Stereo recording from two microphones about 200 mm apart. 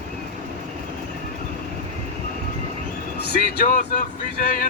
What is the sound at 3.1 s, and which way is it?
Speech, 55° left (ahead or behind).